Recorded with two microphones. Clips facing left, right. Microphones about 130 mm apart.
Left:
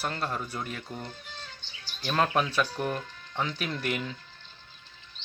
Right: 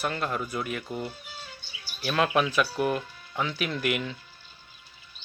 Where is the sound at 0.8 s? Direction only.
10° right (ahead or behind).